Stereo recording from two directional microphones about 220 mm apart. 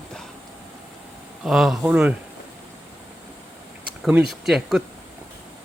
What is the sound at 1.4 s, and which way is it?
Speech, centre (ahead or behind).